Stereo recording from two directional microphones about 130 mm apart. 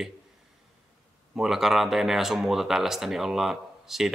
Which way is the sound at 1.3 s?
5° right (ahead or behind).